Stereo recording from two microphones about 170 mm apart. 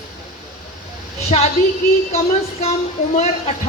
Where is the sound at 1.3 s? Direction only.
35° left (ahead or behind).